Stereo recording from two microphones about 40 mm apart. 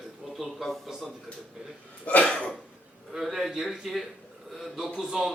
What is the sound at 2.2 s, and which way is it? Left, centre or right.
Cough, left.